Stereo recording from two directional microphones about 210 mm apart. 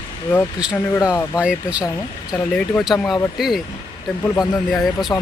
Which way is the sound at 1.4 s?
5° right (ahead or behind).